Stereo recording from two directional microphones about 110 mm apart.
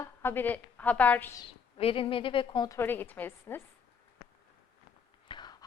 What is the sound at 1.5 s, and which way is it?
Speech, 55° left (ahead or behind).